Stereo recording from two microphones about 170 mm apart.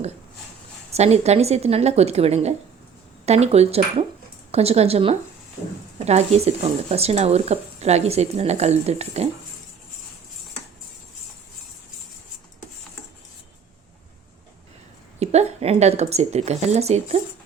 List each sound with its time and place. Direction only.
0.9 s speech: 40° right (ahead or behind)
15.2 s a woman's voice: 40° right (ahead or behind)